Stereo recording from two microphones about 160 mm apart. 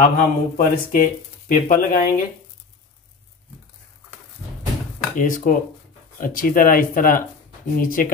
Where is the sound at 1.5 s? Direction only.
55° left (ahead or behind).